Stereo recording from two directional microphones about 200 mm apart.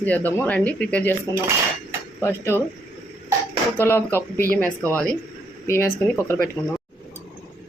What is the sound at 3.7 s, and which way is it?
Speech, 10° left (ahead or behind).